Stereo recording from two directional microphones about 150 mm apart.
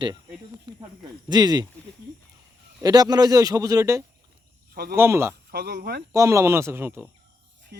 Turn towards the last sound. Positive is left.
turn(degrees=-15)  # may be behind; listen again after turning